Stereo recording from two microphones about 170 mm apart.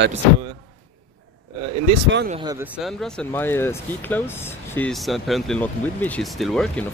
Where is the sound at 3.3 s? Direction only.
15° left (ahead or behind).